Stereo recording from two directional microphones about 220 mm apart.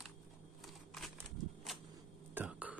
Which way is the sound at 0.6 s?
Centre (ahead or behind).